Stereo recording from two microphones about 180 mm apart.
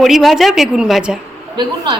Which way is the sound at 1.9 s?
25° right (ahead or behind).